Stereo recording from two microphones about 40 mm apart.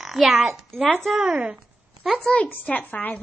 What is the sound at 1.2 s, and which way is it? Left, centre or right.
Speech, right.